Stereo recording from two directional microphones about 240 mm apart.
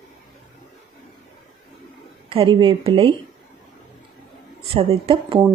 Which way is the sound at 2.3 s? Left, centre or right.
Right.